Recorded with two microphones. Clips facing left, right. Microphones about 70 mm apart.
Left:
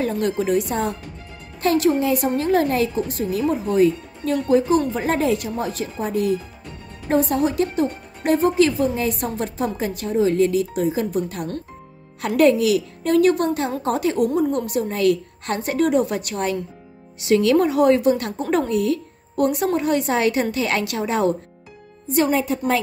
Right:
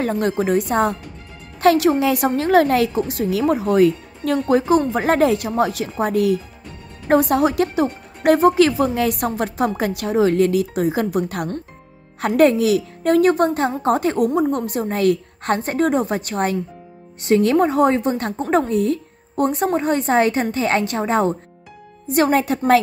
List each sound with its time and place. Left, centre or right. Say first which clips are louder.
0.0 s a woman's voice: right 2 dB; right
22.1 s speech: right 2 dB; right